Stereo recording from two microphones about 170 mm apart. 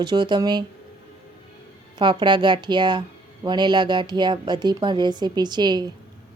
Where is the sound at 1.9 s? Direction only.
25° right (ahead or behind).